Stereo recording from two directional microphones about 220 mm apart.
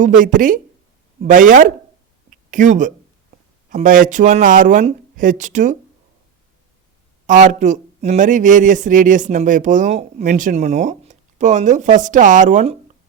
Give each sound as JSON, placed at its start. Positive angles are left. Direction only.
{"t": 0.0, "sound": "speech", "side_deg": -35}
{"t": 7.3, "sound": "speech", "side_deg": -35}